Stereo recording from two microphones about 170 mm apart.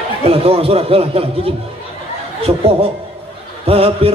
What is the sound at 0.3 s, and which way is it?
Music, 35° right (ahead or behind).